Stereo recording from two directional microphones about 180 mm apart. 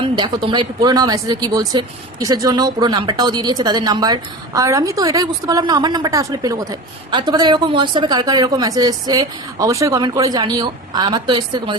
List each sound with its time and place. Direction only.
0.0 s speech: 25° right (ahead or behind)